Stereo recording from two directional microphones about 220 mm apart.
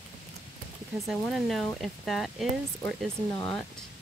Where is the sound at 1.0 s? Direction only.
Centre (ahead or behind).